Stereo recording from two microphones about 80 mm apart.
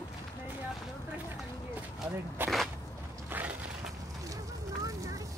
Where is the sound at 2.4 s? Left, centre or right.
Right.